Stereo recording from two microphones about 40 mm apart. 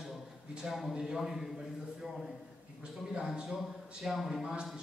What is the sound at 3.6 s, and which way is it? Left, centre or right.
Speech, centre.